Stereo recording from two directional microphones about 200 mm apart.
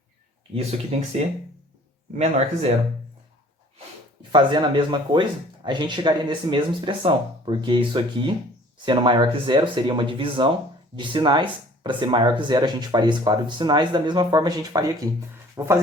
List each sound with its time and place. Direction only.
0.9 s speech: 30° right (ahead or behind)
2.1 s speech: 30° right (ahead or behind)
4.3 s speech: 25° right (ahead or behind)